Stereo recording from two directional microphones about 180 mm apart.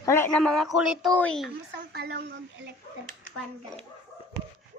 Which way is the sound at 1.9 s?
65° right (ahead or behind).